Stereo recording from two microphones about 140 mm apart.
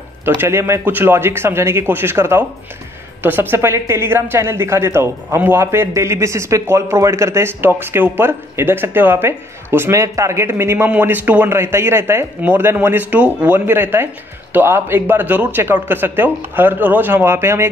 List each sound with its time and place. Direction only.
0.2 s speech: 15° right (ahead or behind)